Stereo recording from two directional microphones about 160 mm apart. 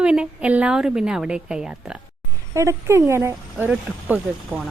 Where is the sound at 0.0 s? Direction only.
5° right (ahead or behind).